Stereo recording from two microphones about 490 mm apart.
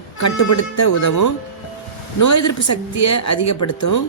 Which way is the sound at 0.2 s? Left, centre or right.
Left.